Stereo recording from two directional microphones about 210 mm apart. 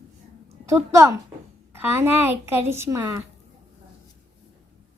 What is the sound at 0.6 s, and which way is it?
A woman's voice, 15° right (ahead or behind).